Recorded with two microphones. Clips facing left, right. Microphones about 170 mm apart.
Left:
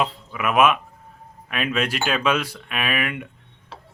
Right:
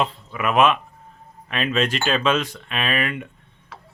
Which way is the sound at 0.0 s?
5° left (ahead or behind).